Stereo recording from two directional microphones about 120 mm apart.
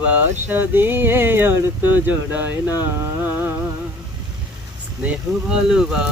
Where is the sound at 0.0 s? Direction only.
15° right (ahead or behind).